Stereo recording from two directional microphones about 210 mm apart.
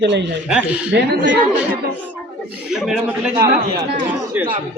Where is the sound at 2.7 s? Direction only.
5° right (ahead or behind).